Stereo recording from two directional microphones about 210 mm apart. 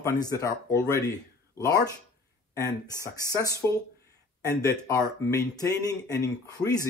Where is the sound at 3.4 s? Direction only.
15° left (ahead or behind).